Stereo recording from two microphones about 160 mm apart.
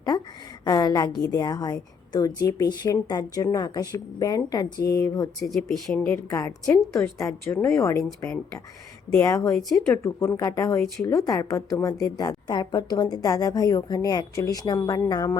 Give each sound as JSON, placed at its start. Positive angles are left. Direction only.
{"t": 0.1, "sound": "a woman's voice", "side_deg": 25}
{"t": 5.4, "sound": "speech", "side_deg": 0}
{"t": 6.3, "sound": "a woman's voice", "side_deg": 20}